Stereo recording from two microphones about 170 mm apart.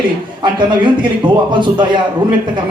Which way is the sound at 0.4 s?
30° right (ahead or behind).